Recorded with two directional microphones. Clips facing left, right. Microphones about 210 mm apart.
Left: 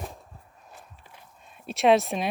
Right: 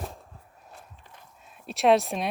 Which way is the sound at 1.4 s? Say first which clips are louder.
Left 1 dB; centre (ahead or behind).